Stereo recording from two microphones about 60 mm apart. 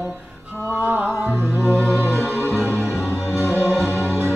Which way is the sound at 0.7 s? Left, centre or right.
Right.